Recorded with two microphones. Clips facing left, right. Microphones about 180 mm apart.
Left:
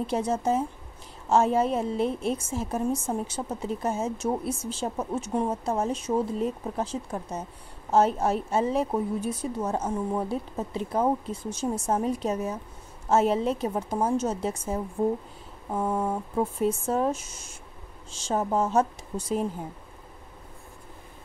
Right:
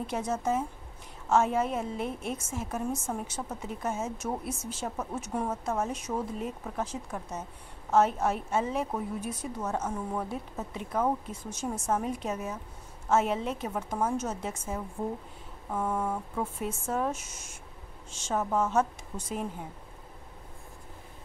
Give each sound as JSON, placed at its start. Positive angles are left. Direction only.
{"t": 0.0, "sound": "a woman's voice", "side_deg": 30}